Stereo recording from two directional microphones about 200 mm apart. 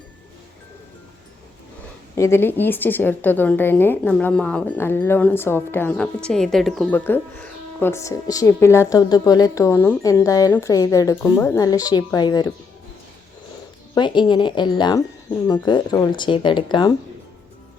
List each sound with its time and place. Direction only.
2.1 s speech: 15° left (ahead or behind)
13.9 s speech: 25° left (ahead or behind)